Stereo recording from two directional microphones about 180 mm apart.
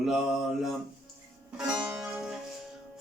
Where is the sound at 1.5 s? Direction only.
5° right (ahead or behind).